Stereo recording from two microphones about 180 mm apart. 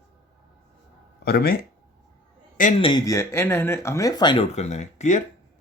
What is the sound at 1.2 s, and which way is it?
Speech, 60° left (ahead or behind).